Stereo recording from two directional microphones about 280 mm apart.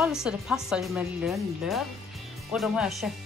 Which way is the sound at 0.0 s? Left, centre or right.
Centre.